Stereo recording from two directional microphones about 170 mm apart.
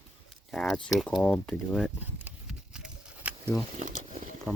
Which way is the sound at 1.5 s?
5° right (ahead or behind).